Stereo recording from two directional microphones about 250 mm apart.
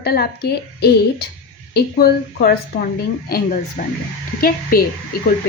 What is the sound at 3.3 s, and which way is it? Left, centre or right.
A woman's voice, left.